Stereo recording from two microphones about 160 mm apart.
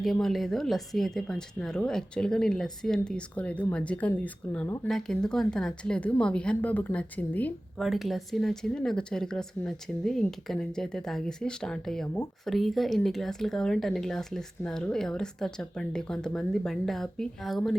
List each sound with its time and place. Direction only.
0.0 s speech: centre (ahead or behind)
7.9 s speech: centre (ahead or behind)